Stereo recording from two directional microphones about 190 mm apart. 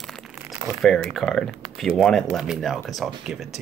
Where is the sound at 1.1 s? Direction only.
Centre (ahead or behind).